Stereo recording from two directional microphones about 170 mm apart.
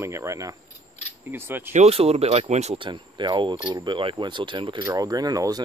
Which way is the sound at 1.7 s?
40° right (ahead or behind).